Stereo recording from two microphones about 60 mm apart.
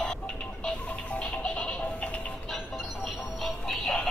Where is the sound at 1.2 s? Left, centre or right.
Left.